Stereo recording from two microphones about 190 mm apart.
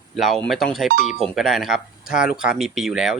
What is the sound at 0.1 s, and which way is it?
Speech, centre (ahead or behind).